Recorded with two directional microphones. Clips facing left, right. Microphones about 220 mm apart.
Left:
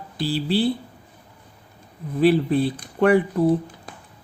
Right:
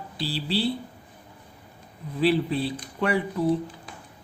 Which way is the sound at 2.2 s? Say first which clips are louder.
Left 5 dB; 50° left (ahead or behind).